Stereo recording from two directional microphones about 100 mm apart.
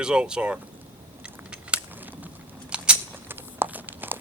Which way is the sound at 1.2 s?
10° right (ahead or behind).